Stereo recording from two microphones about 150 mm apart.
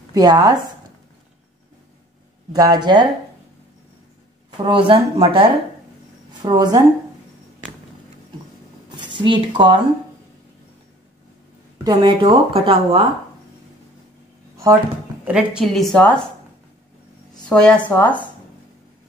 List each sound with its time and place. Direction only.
0.1 s speech: 25° right (ahead or behind)
2.5 s speech: 25° right (ahead or behind)
4.5 s a woman's voice: 35° right (ahead or behind)
8.9 s speech: 30° right (ahead or behind)
11.8 s a woman's voice: 30° right (ahead or behind)
15.2 s a woman's voice: 5° right (ahead or behind)
17.5 s a woman's voice: 5° left (ahead or behind)